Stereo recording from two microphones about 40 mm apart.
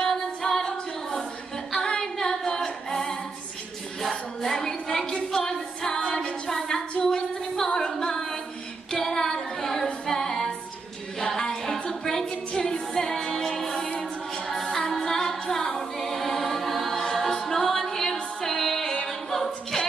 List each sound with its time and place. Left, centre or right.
0.0 s female singing: centre
1.9 s a capella: centre
4.1 s a sound: centre
8.9 s female singing: centre
10.0 s music: centre
12.9 s a capella: centre
14.5 s music: centre
14.9 s a capella: centre